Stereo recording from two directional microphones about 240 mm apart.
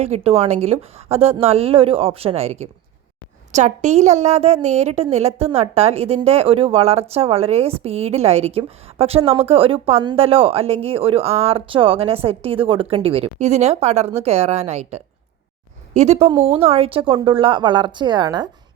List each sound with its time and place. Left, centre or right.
0.0 s a woman's voice: right